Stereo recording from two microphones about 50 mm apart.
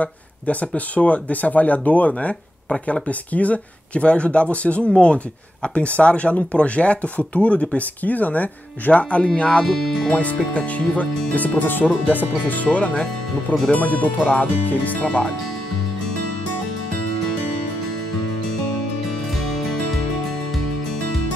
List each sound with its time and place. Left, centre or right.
0.0 s speech: left
12.6 s speech: left
19.3 s music: centre